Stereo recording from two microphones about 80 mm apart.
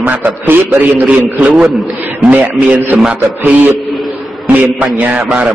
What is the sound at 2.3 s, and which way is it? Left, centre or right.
Speech, centre.